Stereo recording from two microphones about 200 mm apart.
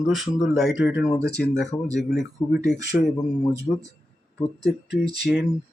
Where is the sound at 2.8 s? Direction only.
60° left (ahead or behind).